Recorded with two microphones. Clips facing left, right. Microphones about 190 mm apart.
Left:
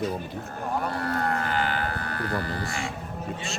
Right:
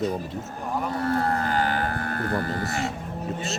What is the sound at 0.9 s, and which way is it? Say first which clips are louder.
Vehicle: right 3 dB; 30° right (ahead or behind).